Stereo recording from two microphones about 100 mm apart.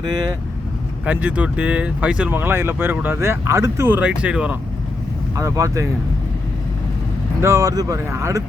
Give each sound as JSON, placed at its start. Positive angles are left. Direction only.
{"t": 1.0, "sound": "speech", "side_deg": -15}
{"t": 2.3, "sound": "speech", "side_deg": -20}
{"t": 5.4, "sound": "speech", "side_deg": -30}
{"t": 7.4, "sound": "speech", "side_deg": -30}